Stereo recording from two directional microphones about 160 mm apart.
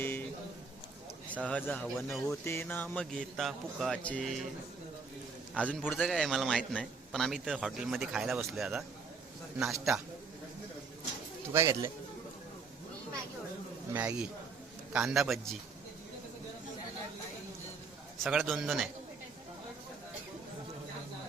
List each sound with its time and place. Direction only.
1.5 s a man's voice: 10° left (ahead or behind)
2.4 s speech: 15° left (ahead or behind)
5.5 s a man's voice: 10° left (ahead or behind)
11.5 s a man's voice: 15° right (ahead or behind)
13.9 s a man's voice: 10° right (ahead or behind)
18.2 s a man's voice: 5° right (ahead or behind)